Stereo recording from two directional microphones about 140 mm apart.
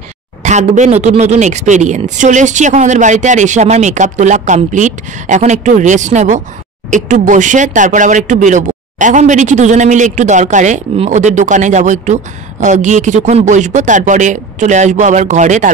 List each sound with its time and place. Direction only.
0.4 s speech: 55° right (ahead or behind)